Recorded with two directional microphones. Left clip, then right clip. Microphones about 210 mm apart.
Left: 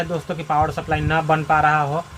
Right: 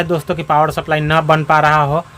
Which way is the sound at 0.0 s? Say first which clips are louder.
Right 7 dB; 50° right (ahead or behind).